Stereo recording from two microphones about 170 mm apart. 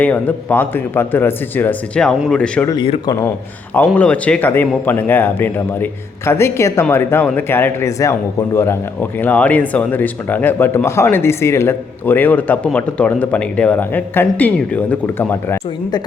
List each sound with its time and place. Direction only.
0.0 s a man's voice: 10° left (ahead or behind)
2.6 s speech: 30° left (ahead or behind)
3.9 s a man's voice: 5° left (ahead or behind)